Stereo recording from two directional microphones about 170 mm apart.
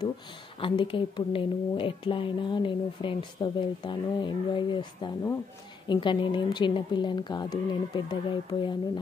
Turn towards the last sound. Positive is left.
turn(degrees=25)  # may be behind; listen again after turning